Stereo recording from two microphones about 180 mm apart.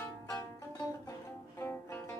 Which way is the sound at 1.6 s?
10° left (ahead or behind).